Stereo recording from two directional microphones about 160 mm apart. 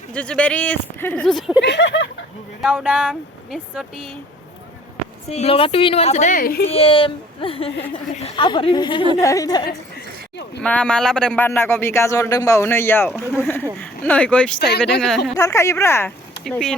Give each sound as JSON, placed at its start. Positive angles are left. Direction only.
{"t": 0.1, "sound": "a man's voice", "side_deg": 5}
{"t": 1.6, "sound": "speech", "side_deg": 90}
{"t": 2.6, "sound": "speech", "side_deg": -5}
{"t": 5.3, "sound": "speech", "side_deg": 40}
{"t": 6.7, "sound": "a woman's voice", "side_deg": 35}
{"t": 10.6, "sound": "a man's voice", "side_deg": 5}
{"t": 13.1, "sound": "a man's voice", "side_deg": 0}
{"t": 15.4, "sound": "a man's voice", "side_deg": 20}
{"t": 16.4, "sound": "speech", "side_deg": 5}